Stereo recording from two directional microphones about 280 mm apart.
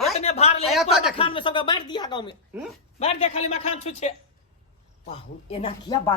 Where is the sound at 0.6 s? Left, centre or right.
Centre.